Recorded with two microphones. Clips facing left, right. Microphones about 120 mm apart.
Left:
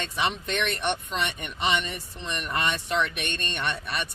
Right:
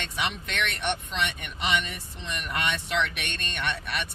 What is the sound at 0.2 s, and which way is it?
Speech, 35° left (ahead or behind).